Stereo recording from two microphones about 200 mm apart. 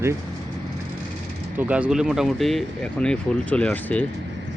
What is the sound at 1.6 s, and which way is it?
Speech, 5° right (ahead or behind).